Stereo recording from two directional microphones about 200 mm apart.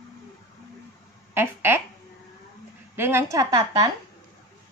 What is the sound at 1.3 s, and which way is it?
Speech, 10° right (ahead or behind).